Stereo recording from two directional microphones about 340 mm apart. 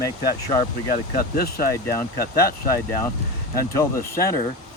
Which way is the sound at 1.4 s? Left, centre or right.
Left.